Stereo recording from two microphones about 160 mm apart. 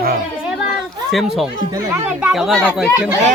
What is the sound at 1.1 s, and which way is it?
Speech, centre (ahead or behind).